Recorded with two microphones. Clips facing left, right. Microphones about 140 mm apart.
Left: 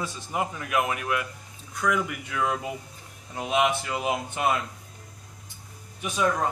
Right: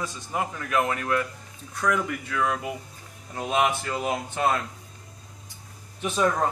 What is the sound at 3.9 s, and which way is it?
Speech, 15° left (ahead or behind).